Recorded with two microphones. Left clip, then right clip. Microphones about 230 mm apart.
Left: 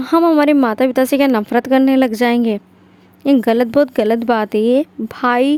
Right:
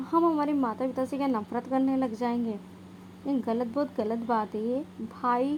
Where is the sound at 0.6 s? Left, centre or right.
Left.